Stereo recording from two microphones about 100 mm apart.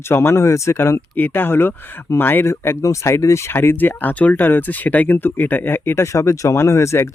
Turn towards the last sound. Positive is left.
turn(degrees=30)  # may be behind; listen again after turning